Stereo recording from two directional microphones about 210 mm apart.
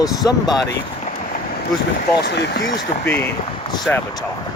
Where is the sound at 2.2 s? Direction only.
55° left (ahead or behind).